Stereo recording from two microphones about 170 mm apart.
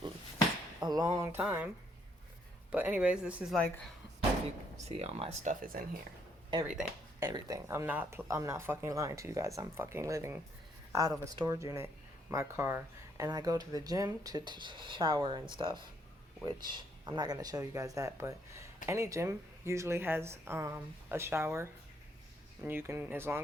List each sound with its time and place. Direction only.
0.8 s speech: 25° right (ahead or behind)
1.4 s speech: 10° right (ahead or behind)
2.7 s speech: 10° right (ahead or behind)
4.9 s speech: 40° right (ahead or behind)
7.2 s speech: 20° right (ahead or behind)